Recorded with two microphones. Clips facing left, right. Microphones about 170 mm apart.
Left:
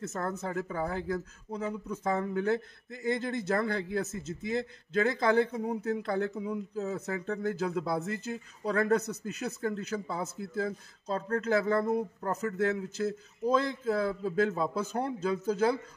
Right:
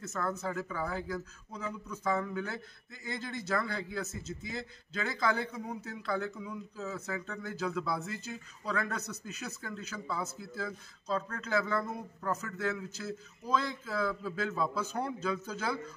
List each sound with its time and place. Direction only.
0.0 s speech: 50° left (ahead or behind)